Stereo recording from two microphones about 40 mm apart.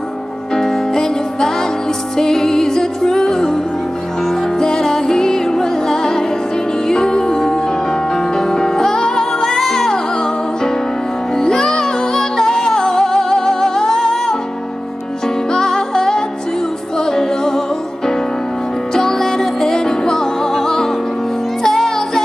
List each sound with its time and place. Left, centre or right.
0.6 s music: centre